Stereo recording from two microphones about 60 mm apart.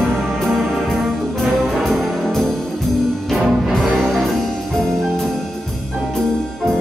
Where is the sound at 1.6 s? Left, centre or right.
Centre.